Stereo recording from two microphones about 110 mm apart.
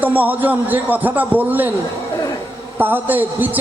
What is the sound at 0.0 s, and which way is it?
A man's voice, 15° right (ahead or behind).